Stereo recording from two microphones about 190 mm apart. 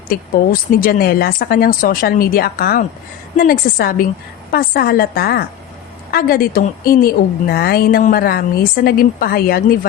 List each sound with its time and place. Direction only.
0.1 s a woman's voice: 50° left (ahead or behind)